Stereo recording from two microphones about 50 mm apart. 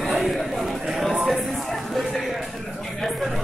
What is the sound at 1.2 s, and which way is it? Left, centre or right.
Music, centre.